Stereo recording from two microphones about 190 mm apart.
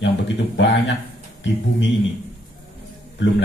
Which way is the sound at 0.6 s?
70° left (ahead or behind).